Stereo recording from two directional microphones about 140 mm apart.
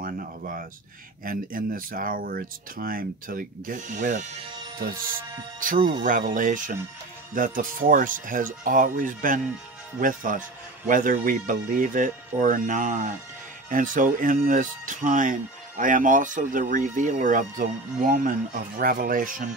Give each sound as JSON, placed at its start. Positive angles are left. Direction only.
{"t": 0.0, "sound": "a sound", "side_deg": -85}
{"t": 1.2, "sound": "speech", "side_deg": -90}
{"t": 5.8, "sound": "speech", "side_deg": -35}
{"t": 6.0, "sound": "speech", "side_deg": -70}